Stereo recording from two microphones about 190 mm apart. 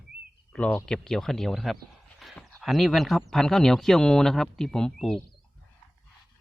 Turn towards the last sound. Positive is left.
turn(degrees=0)  # may be behind; listen again after turning